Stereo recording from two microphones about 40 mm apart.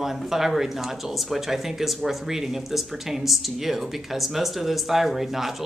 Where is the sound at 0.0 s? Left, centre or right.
Centre.